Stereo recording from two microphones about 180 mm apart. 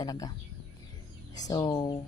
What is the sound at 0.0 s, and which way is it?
Speech, 20° left (ahead or behind).